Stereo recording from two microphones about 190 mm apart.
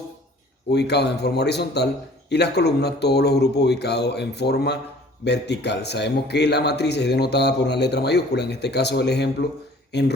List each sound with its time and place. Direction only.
0.7 s a man's voice: 60° left (ahead or behind)